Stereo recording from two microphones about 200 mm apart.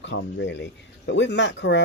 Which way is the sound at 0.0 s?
65° left (ahead or behind).